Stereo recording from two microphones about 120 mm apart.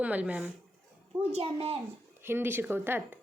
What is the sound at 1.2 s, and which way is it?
Speech, 60° right (ahead or behind).